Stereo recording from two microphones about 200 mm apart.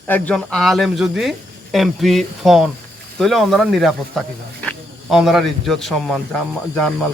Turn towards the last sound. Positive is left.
turn(degrees=0)  # may be behind; listen again after turning